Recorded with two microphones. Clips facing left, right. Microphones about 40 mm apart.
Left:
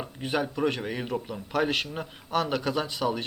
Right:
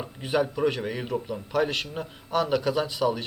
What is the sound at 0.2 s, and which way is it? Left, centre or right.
Speech, centre.